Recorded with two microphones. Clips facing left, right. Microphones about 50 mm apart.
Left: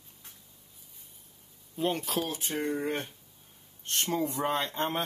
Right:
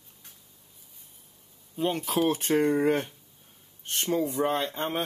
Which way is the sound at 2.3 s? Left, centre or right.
Right.